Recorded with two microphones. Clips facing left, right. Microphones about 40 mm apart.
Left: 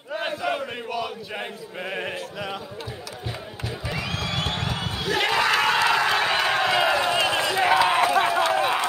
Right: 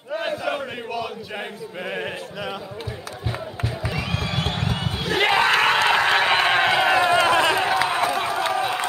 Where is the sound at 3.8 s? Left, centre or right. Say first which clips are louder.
Right 1 dB; right.